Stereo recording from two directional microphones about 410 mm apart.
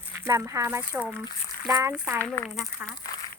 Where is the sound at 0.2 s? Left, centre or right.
Centre.